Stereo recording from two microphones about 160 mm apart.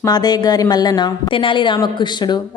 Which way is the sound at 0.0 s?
25° left (ahead or behind).